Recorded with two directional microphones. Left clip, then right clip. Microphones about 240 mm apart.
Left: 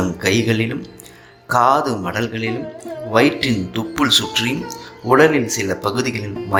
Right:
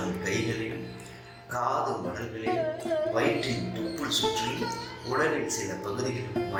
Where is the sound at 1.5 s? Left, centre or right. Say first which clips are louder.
Left 14 dB; left.